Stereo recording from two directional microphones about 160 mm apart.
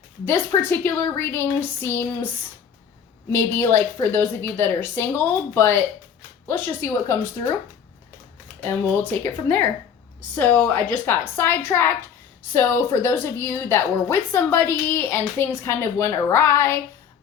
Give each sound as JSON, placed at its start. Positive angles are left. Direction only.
{"t": 0.3, "sound": "a woman's voice", "side_deg": 15}
{"t": 3.3, "sound": "a woman's voice", "side_deg": 15}
{"t": 8.6, "sound": "a woman's voice", "side_deg": 15}